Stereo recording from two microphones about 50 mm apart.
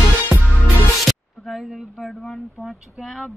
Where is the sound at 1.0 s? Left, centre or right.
Centre.